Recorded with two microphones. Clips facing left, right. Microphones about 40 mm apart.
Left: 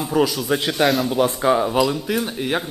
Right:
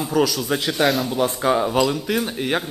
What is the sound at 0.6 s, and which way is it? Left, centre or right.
Speech, centre.